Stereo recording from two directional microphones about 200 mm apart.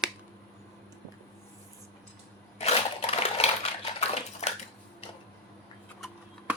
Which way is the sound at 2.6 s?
30° left (ahead or behind).